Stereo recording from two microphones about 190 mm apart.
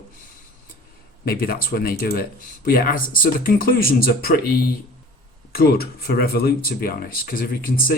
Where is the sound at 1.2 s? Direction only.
50° left (ahead or behind).